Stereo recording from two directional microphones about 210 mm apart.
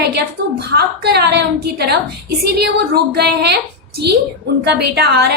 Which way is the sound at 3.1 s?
50° right (ahead or behind).